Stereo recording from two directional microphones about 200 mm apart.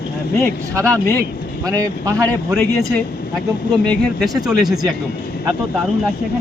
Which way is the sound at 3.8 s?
Centre (ahead or behind).